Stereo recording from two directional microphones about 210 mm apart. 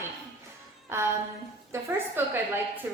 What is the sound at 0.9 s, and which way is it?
Speech, 10° right (ahead or behind).